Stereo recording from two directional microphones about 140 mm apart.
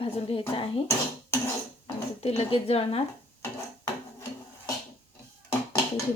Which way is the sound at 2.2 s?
45° left (ahead or behind).